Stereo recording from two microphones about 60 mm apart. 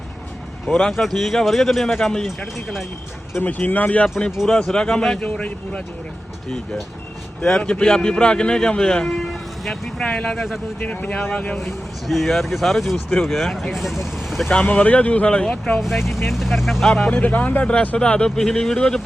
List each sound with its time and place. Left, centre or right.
0.7 s speech: centre
3.4 s speech: left
4.4 s speech: centre
5.2 s speech: left
7.4 s speech: centre
10.2 s speech: centre
10.8 s speech: left
11.5 s speech: centre
14.5 s speech: left
15.8 s speech: centre
17.1 s speech: left